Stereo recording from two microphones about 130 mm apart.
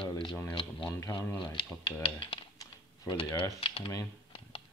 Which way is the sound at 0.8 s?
25° left (ahead or behind).